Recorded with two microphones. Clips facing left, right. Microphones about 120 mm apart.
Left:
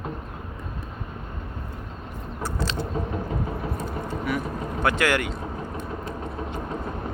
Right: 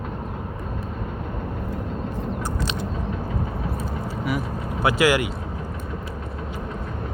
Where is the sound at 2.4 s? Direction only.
15° right (ahead or behind).